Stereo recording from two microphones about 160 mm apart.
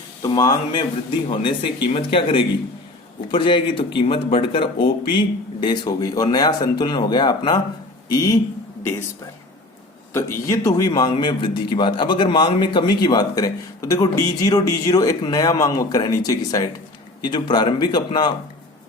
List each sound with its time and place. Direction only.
0.2 s a man's voice: 20° left (ahead or behind)
10.1 s a man's voice: 15° left (ahead or behind)